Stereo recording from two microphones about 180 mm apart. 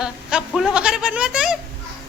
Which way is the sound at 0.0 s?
5° right (ahead or behind).